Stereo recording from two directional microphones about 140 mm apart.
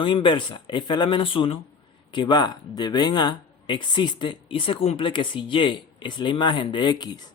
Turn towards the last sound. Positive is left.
turn(degrees=30)  # may be behind; listen again after turning